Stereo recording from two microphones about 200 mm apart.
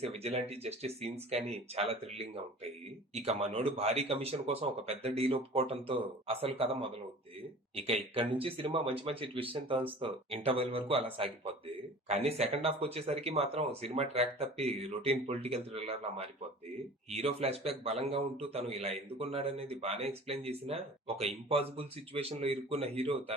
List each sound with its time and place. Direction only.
0.0 s a man's voice: 30° right (ahead or behind)